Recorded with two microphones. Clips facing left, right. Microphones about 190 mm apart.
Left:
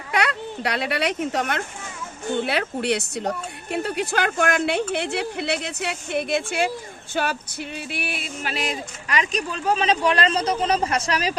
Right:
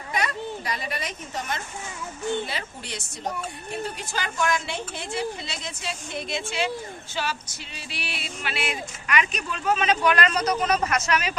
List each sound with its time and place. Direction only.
0.1 s speech: 70° left (ahead or behind)
7.1 s music: 55° left (ahead or behind); by 11.3 s 35° left (ahead or behind)